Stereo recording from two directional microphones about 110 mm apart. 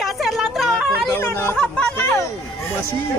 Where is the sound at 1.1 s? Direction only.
20° left (ahead or behind).